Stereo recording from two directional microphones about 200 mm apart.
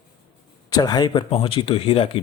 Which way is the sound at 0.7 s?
20° left (ahead or behind).